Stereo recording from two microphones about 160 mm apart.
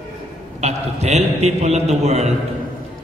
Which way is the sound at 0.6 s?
45° right (ahead or behind).